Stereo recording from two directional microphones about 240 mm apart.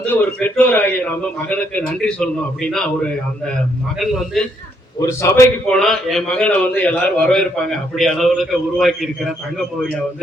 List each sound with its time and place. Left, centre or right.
0.0 s a man's voice: centre
4.9 s a man's voice: centre